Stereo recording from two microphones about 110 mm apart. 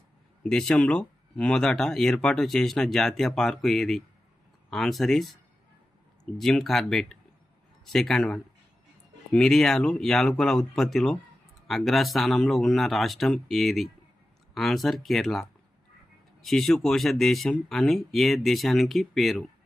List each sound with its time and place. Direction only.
0.4 s speech: 5° left (ahead or behind)